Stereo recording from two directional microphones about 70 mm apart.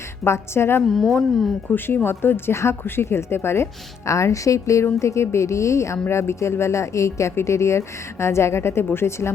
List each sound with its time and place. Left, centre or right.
0.3 s speech: left
0.9 s a woman's voice: centre
1.7 s speech: left